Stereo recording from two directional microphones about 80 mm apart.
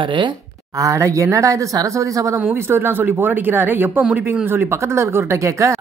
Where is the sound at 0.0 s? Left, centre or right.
Right.